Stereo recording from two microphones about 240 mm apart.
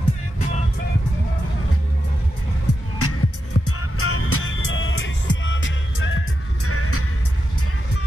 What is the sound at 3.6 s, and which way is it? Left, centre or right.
Music, left.